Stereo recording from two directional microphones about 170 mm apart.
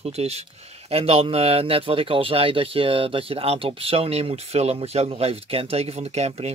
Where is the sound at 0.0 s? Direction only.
40° right (ahead or behind).